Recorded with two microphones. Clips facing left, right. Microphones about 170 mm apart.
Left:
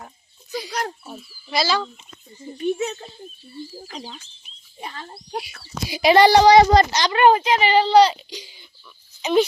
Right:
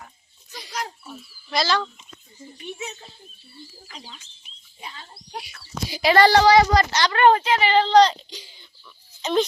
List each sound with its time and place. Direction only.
0.7 s speech: 50° left (ahead or behind)
1.3 s speech: 5° left (ahead or behind)
2.6 s speech: 50° left (ahead or behind)
3.8 s speech: 40° left (ahead or behind)
4.8 s speech: 55° left (ahead or behind)
5.9 s speech: 15° left (ahead or behind)